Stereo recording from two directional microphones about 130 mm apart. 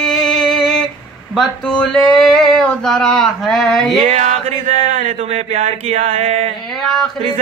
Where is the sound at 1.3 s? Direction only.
5° left (ahead or behind).